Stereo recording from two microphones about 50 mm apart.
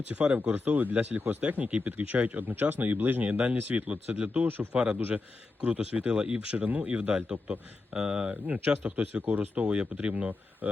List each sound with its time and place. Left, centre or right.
0.1 s speech: right
2.5 s speech: right
4.4 s speech: right
4.7 s speech: centre
9.6 s speech: right